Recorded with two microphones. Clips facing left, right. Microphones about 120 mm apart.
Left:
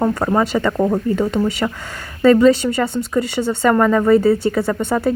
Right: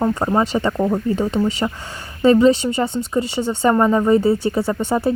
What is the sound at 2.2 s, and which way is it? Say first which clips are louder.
Speech: left 1 dB; 20° right (ahead or behind).